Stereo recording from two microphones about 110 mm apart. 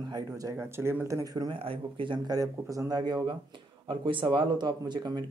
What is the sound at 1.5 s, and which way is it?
Speech, 50° right (ahead or behind).